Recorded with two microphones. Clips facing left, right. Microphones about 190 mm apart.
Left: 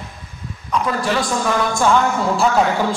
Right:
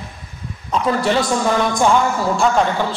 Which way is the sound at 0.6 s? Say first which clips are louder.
Right 2 dB; 30° right (ahead or behind).